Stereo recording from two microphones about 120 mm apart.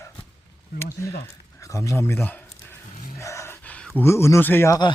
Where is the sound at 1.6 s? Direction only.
25° left (ahead or behind).